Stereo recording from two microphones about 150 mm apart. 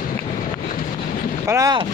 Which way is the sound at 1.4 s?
20° right (ahead or behind).